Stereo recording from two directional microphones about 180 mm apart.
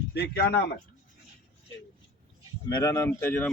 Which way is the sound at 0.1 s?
65° left (ahead or behind).